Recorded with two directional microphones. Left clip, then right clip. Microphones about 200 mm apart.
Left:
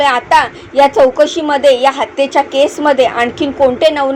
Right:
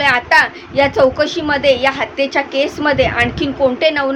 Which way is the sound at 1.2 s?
25° right (ahead or behind).